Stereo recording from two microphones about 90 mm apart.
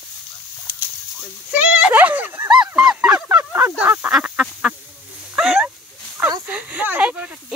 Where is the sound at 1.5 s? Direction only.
15° right (ahead or behind).